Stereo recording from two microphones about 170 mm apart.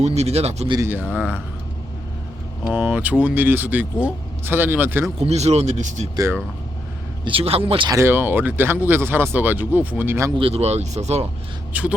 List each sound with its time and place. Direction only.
0.0 s speech: 40° right (ahead or behind)
0.7 s speech: 15° right (ahead or behind)
2.6 s speech: 10° right (ahead or behind)
5.2 s speech: 40° right (ahead or behind)
6.1 s speech: 15° right (ahead or behind)
7.3 s speech: 35° right (ahead or behind)
7.9 s speech: 15° right (ahead or behind)
10.3 s speech: 35° right (ahead or behind)
11.7 s speech: 10° right (ahead or behind)